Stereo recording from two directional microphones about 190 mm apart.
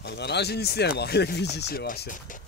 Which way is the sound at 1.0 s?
60° left (ahead or behind).